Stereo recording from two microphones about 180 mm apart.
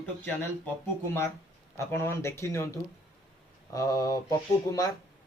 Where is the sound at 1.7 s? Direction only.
15° left (ahead or behind).